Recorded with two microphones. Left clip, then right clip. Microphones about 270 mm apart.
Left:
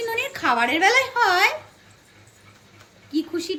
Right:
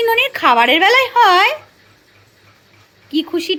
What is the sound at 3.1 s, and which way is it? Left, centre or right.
Speech, centre.